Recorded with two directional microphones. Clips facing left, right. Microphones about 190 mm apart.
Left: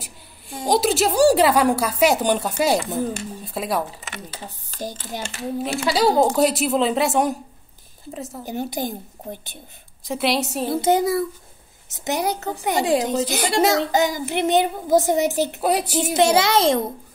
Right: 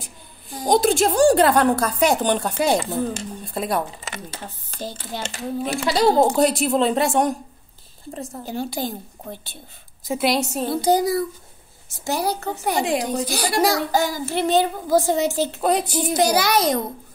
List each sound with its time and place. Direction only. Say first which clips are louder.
0.7 s a woman's voice: right 2 dB; 5° left (ahead or behind)
4.4 s speech: left 1 dB; 15° left (ahead or behind)
5.6 s a woman's voice: even; centre (ahead or behind)
8.5 s a woman's voice: left 1 dB; 20° left (ahead or behind)
10.0 s a woman's voice: right 1 dB; centre (ahead or behind)
10.7 s a child's voice: even; 25° left (ahead or behind)
15.6 s a woman's voice: right 2 dB; 5° left (ahead or behind)
16.0 s a child's voice: left 5 dB; 25° left (ahead or behind)